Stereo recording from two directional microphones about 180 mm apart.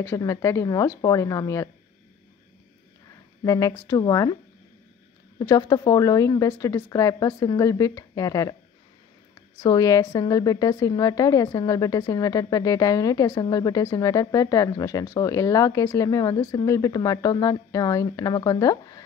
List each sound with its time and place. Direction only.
0.0 s a woman's voice: 15° left (ahead or behind)
3.4 s a woman's voice: 15° left (ahead or behind)
5.4 s a woman's voice: 20° left (ahead or behind)
9.6 s a woman's voice: 20° left (ahead or behind)